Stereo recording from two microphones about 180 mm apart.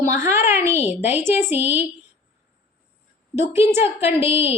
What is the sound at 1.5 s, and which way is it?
Speech, 35° left (ahead or behind).